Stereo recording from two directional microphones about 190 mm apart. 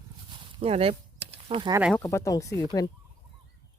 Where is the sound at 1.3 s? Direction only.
30° right (ahead or behind).